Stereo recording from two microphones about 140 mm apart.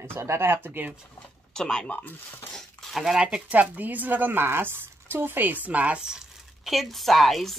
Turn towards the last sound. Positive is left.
turn(degrees=0)  # may be behind; listen again after turning